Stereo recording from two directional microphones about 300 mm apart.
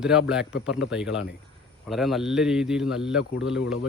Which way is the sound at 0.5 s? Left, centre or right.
Left.